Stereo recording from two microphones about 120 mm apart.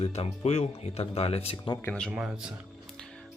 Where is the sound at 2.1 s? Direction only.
5° right (ahead or behind).